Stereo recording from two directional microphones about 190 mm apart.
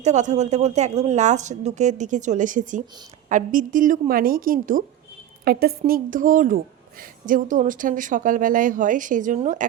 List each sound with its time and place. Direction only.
0.0 s a woman's voice: 40° right (ahead or behind)